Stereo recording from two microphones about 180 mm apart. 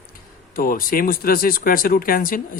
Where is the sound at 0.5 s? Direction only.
55° left (ahead or behind).